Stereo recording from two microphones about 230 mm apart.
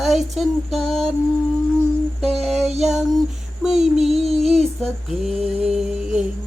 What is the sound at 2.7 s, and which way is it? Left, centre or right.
Music, right.